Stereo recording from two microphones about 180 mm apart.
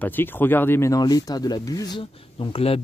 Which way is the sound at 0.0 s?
10° left (ahead or behind).